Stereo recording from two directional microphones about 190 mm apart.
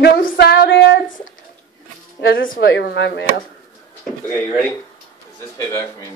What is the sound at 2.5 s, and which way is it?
Speech, 65° left (ahead or behind).